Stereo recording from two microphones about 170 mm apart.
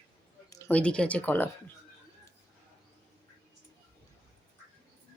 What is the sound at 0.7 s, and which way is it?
Speech, 5° left (ahead or behind).